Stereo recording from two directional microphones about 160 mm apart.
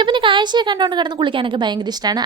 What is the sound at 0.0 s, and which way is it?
A woman's voice, 30° right (ahead or behind).